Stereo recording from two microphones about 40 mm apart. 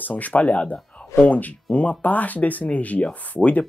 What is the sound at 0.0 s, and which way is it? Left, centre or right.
Speech, left.